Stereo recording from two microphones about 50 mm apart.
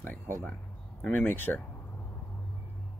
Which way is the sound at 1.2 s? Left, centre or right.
Left.